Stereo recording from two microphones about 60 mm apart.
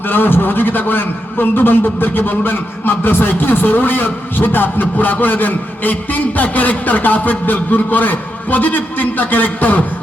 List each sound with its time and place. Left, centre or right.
0.1 s a man's voice: left